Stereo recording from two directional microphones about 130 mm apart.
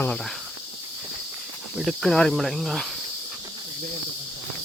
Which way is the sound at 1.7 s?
Centre (ahead or behind).